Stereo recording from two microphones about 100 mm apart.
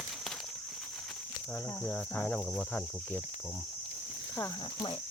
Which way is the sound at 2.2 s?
10° left (ahead or behind).